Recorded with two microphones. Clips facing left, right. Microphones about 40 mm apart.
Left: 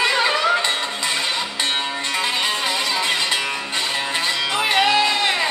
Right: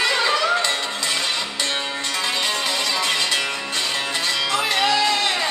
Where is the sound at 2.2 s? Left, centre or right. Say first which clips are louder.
Left 1 dB; left.